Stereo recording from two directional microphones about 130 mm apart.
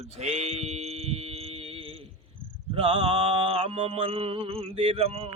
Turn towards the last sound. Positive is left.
turn(degrees=-50)  # may be behind; listen again after turning